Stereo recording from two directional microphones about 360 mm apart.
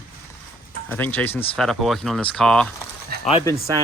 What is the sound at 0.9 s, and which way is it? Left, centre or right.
Speech, centre.